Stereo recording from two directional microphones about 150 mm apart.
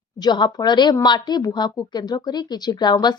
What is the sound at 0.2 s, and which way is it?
A woman's voice, 30° left (ahead or behind).